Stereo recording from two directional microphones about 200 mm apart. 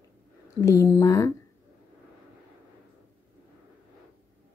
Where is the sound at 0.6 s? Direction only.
15° left (ahead or behind).